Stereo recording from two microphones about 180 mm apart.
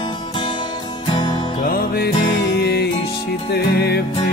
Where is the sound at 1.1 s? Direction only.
25° left (ahead or behind).